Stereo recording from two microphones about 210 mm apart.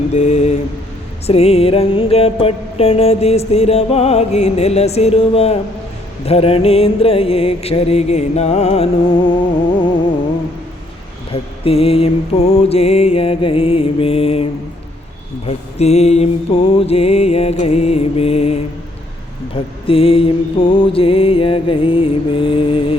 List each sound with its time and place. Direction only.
0.1 s mantra: 35° left (ahead or behind)
1.3 s music: 30° left (ahead or behind)
11.3 s music: 25° left (ahead or behind)
15.4 s music: 30° left (ahead or behind)